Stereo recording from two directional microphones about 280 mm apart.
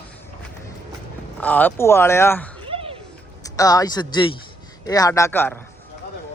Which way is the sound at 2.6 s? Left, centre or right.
Centre.